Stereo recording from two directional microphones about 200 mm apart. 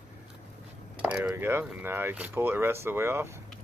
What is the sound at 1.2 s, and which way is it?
Speech, 10° right (ahead or behind).